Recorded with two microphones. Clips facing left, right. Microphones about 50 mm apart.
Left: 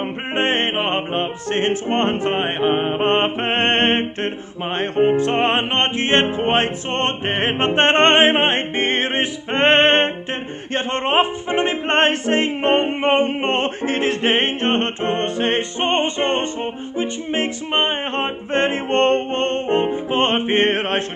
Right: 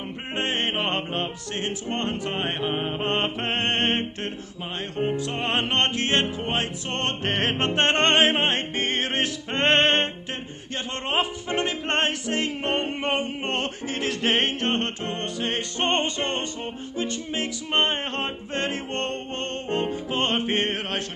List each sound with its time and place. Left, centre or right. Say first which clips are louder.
0.4 s music: left 7 dB; left
0.7 s music: left 6 dB; left
1.5 s music: left 13 dB; left
5.6 s music: left 4 dB; left
10.7 s speech: left 8 dB; left
11.5 s music: left 7 dB; left
15.8 s music: left 3 dB; left